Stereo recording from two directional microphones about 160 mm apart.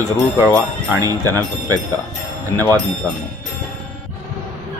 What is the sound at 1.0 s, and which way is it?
Speech, 20° right (ahead or behind).